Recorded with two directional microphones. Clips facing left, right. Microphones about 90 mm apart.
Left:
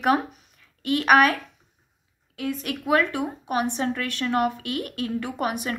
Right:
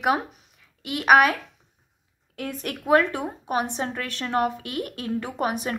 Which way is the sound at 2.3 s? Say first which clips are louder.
Left 3 dB; 40° right (ahead or behind).